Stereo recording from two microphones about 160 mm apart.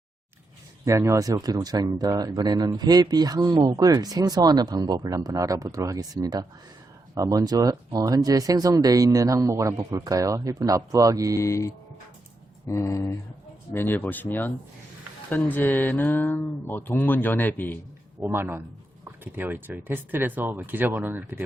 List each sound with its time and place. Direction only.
0.9 s speech: 20° right (ahead or behind)
11.3 s speech: 20° left (ahead or behind)
18.2 s speech: 15° right (ahead or behind)